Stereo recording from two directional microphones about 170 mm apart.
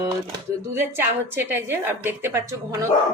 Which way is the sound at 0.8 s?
10° right (ahead or behind).